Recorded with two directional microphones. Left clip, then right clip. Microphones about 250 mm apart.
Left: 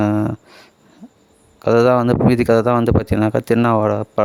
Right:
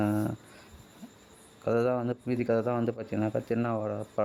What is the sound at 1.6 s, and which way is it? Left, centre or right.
Speech, left.